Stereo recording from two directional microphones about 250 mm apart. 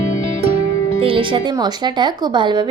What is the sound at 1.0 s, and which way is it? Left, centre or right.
A woman's voice, right.